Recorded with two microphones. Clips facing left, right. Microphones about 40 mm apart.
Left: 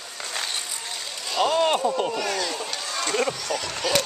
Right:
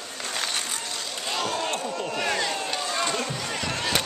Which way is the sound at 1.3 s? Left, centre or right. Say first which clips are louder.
Left 8 dB; left.